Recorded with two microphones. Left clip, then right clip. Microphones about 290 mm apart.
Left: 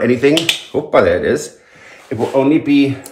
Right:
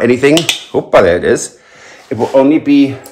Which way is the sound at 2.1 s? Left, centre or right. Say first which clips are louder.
Right 4 dB; right.